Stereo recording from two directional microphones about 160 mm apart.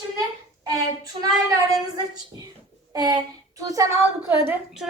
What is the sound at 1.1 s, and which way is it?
Speech, 40° right (ahead or behind).